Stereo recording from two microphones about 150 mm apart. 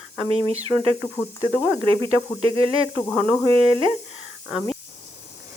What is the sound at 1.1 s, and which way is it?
Speech, 15° left (ahead or behind).